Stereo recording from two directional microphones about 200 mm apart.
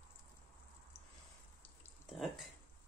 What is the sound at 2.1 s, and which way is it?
Speech, centre (ahead or behind).